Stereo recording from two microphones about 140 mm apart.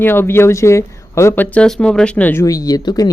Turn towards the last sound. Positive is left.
turn(degrees=30)  # may be behind; listen again after turning